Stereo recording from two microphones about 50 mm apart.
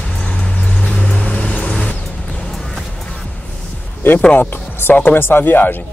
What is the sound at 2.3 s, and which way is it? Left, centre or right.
Music, centre.